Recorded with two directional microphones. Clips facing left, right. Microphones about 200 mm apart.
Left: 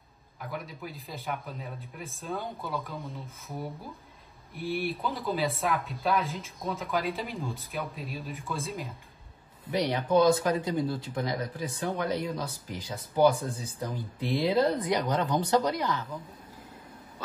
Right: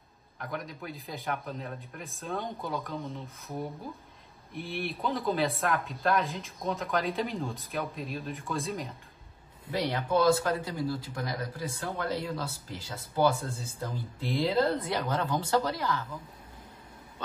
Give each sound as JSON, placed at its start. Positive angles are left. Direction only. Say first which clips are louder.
{"t": 0.4, "sound": "speech", "louder": "even", "side_deg": 5}
{"t": 9.8, "sound": "speech", "louder": "left 3 dB", "side_deg": 20}